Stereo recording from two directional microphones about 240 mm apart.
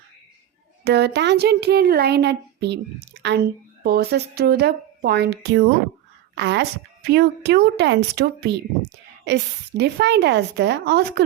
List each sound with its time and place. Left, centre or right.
0.9 s a woman's voice: right
3.8 s a woman's voice: right